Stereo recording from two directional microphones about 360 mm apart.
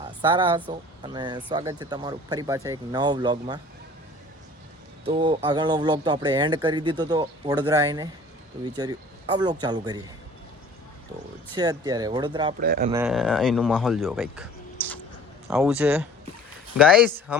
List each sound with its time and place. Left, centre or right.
0.0 s speech: centre
5.0 s speech: centre
11.5 s speech: centre
12.5 s speech: right
12.9 s speech: centre
15.4 s speech: centre